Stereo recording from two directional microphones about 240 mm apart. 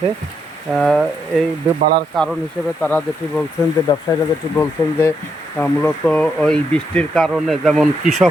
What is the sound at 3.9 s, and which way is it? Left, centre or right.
Speech, centre.